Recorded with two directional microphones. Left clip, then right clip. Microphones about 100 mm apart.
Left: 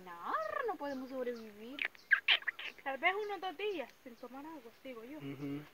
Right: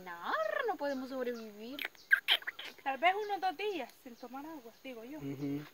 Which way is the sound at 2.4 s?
45° right (ahead or behind).